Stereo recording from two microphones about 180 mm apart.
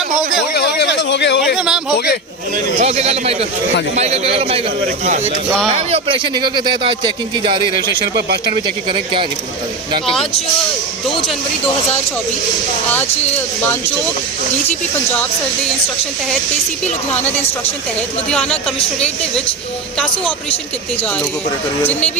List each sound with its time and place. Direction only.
0.5 s speech: 70° left (ahead or behind)
1.4 s speech: 5° right (ahead or behind)
2.8 s a man's voice: 35° right (ahead or behind)
8.1 s speech: 65° right (ahead or behind)
8.5 s speech: 30° right (ahead or behind)
16.8 s a woman's voice: 10° left (ahead or behind)